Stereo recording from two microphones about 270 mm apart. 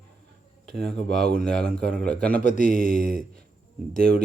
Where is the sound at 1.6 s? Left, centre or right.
Right.